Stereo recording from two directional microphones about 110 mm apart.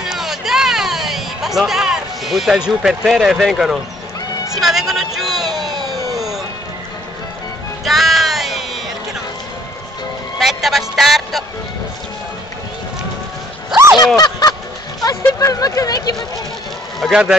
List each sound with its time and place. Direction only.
0.0 s music: 5° right (ahead or behind)
4.6 s a man's voice: 5° right (ahead or behind)
6.1 s music: 5° right (ahead or behind)
7.8 s music: centre (ahead or behind)
10.4 s speech: centre (ahead or behind)
13.9 s honk: 35° left (ahead or behind)
15.0 s speech: 30° left (ahead or behind)
17.0 s speech: 5° right (ahead or behind)